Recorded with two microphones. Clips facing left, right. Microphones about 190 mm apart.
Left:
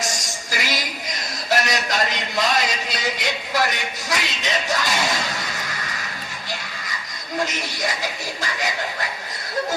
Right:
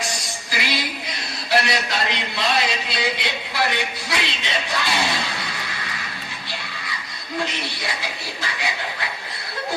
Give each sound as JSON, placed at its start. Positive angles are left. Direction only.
{"t": 0.0, "sound": "music", "side_deg": 45}
{"t": 7.4, "sound": "speech", "side_deg": 45}